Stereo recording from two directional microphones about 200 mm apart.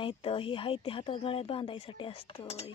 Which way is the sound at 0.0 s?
25° left (ahead or behind).